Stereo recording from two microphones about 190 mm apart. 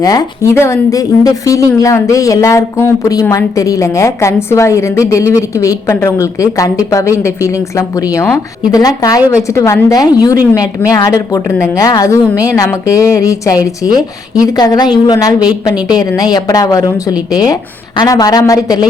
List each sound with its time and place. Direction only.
0.0 s a woman's voice: 20° left (ahead or behind)